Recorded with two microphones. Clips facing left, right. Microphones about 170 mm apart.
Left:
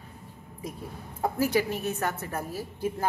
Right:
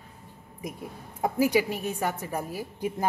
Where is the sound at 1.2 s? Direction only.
15° right (ahead or behind).